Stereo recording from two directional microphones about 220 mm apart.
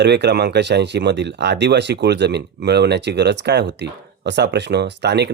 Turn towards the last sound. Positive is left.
turn(degrees=-50)  # may be behind; listen again after turning